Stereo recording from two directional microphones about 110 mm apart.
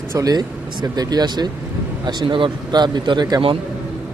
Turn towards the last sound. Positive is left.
turn(degrees=-40)  # may be behind; listen again after turning